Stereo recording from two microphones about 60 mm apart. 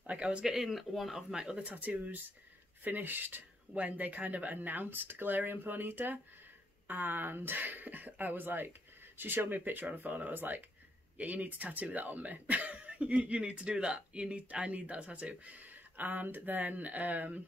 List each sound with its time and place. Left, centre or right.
0.0 s speech: centre
0.6 s speech: centre
1.3 s speech: centre
1.6 s speech: right